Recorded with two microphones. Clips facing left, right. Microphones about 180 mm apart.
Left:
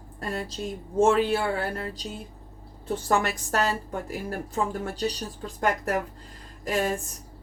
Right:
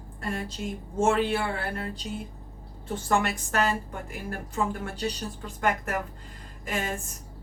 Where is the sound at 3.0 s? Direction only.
40° left (ahead or behind).